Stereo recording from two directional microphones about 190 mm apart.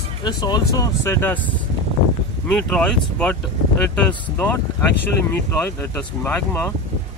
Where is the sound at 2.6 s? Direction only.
5° left (ahead or behind).